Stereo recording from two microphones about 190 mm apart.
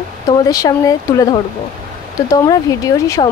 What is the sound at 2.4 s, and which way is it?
Speech, 20° left (ahead or behind).